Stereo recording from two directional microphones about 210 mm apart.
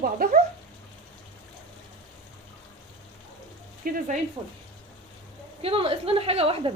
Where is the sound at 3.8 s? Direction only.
45° right (ahead or behind).